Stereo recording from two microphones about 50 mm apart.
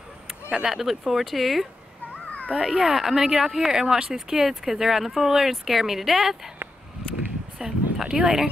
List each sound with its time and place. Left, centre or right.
0.3 s a sound: centre
0.7 s speech: centre
7.5 s speech: centre